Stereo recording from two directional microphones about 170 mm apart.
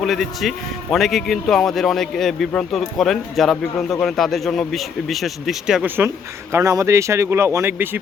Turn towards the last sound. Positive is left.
turn(degrees=-15)  # may be behind; listen again after turning